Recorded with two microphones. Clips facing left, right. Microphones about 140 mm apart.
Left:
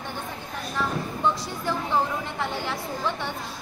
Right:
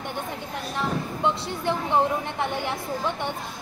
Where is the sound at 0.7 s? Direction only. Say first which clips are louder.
Even; 20° right (ahead or behind).